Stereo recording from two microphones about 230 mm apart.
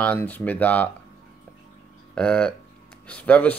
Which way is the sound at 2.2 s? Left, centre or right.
Centre.